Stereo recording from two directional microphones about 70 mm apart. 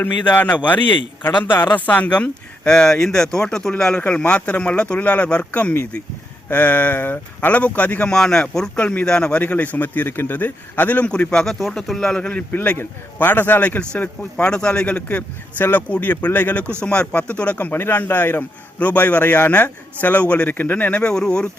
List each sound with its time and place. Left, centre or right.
0.3 s speech: left
8.1 s speech: centre